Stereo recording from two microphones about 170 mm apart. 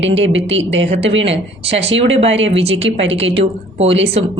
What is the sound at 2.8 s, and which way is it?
Speech, 90° right.